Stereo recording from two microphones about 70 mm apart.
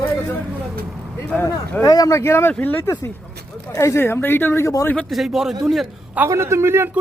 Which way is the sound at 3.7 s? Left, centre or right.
Left.